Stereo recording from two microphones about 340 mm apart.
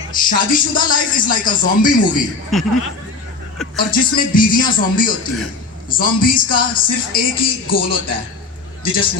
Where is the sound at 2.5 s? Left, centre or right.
Centre.